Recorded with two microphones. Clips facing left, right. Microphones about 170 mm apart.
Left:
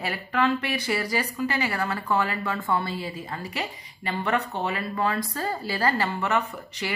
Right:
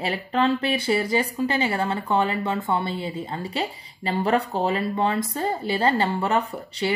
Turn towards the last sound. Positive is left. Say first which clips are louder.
# right 6 dB
turn(degrees=-35)  # may be behind; listen again after turning